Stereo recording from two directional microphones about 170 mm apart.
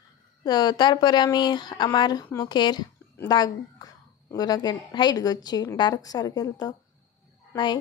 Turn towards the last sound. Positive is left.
turn(degrees=25)  # may be behind; listen again after turning